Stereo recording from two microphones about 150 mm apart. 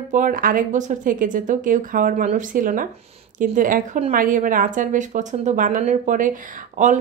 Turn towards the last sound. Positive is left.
turn(degrees=-60)  # may be behind; listen again after turning